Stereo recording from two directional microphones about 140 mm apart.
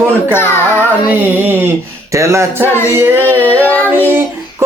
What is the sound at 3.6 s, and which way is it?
Child singing, 10° left (ahead or behind).